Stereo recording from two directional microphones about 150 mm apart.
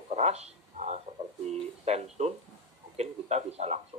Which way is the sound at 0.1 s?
45° right (ahead or behind).